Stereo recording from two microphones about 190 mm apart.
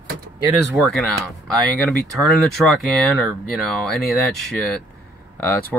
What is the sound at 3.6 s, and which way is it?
Speech, centre (ahead or behind).